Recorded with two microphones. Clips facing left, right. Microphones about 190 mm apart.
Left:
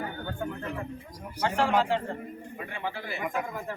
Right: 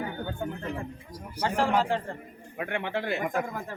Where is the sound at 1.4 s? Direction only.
40° right (ahead or behind).